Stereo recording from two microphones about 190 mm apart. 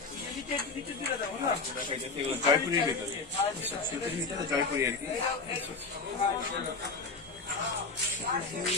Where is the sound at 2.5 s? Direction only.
20° right (ahead or behind).